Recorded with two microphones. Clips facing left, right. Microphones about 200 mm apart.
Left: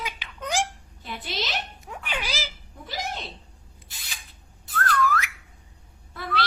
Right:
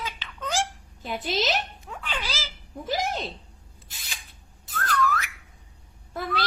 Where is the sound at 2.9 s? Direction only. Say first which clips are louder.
Right 6 dB; 45° right (ahead or behind).